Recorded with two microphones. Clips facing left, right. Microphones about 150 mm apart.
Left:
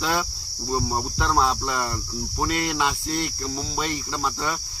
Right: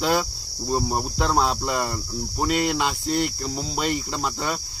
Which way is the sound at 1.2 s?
5° right (ahead or behind).